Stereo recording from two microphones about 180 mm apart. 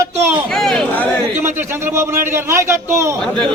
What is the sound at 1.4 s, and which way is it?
A man's voice, 15° right (ahead or behind).